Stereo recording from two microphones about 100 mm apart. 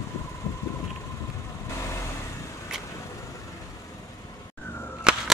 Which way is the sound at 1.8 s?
30° left (ahead or behind).